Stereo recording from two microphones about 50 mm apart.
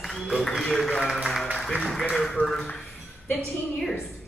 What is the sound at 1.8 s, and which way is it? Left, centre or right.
Speech, centre.